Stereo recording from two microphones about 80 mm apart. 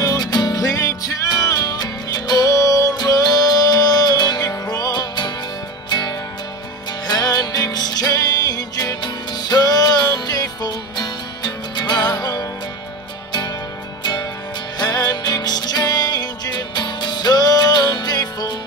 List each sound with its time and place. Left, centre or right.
0.0 s music: left
14.8 s music: left